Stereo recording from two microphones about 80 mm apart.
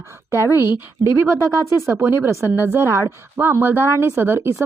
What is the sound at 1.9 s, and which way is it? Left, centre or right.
Speech, right.